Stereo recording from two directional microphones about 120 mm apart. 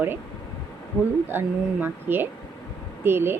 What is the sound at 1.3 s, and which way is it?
Speech, 15° right (ahead or behind).